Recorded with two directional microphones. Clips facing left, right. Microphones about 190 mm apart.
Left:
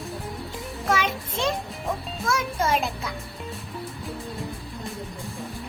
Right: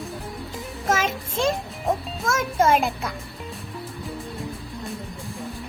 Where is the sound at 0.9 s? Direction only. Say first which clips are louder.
Right 1 dB; 45° right (ahead or behind).